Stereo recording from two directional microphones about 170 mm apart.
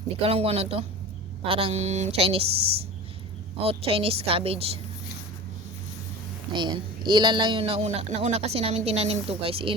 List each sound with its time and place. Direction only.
0.2 s speech: 35° right (ahead or behind)
3.6 s speech: 35° right (ahead or behind)
6.5 s speech: 25° right (ahead or behind)